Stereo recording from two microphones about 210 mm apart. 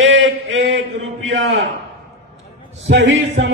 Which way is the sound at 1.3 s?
60° right (ahead or behind).